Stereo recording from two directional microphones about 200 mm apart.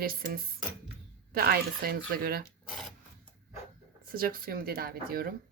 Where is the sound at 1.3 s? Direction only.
45° right (ahead or behind).